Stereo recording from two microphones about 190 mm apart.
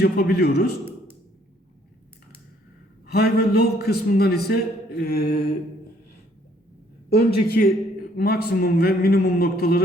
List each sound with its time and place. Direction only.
0.0 s a man's voice: 55° left (ahead or behind)
3.1 s a man's voice: 55° left (ahead or behind)
7.1 s a man's voice: 55° left (ahead or behind)